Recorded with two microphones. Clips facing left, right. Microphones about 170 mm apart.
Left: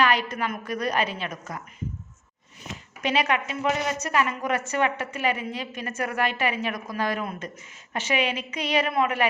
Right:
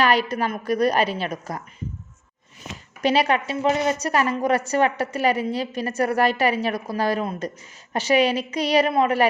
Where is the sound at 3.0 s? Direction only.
35° right (ahead or behind).